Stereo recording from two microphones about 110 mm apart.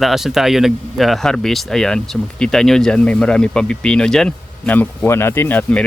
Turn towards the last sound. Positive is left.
turn(degrees=15)  # may be behind; listen again after turning